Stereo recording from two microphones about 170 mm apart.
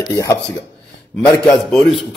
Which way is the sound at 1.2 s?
5° left (ahead or behind).